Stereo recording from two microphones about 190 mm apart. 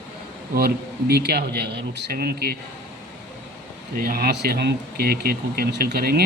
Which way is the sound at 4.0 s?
50° right (ahead or behind).